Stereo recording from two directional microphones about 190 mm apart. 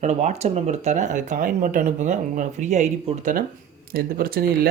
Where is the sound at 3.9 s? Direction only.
50° right (ahead or behind).